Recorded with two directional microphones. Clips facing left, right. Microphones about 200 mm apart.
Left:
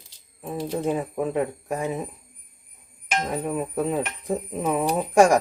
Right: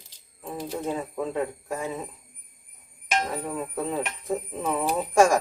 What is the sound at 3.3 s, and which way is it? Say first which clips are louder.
Speech: left 4 dB; 15° left (ahead or behind).